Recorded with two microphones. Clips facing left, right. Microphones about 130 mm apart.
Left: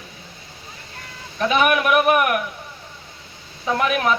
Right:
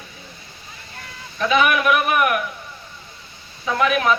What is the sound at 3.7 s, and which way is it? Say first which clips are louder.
Music: right 1 dB; 45° left (ahead or behind).